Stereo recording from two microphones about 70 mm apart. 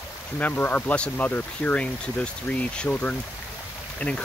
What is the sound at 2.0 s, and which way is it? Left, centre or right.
Speech, centre.